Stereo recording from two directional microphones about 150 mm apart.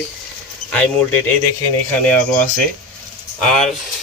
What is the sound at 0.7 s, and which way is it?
Speech, 10° left (ahead or behind).